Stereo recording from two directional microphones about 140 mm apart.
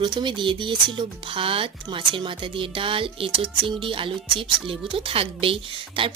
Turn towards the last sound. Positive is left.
turn(degrees=-40)  # may be behind; listen again after turning